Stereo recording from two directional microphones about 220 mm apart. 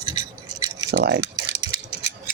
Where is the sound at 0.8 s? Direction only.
50° right (ahead or behind).